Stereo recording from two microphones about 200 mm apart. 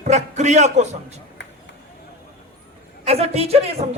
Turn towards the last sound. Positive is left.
turn(degrees=-30)  # may be behind; listen again after turning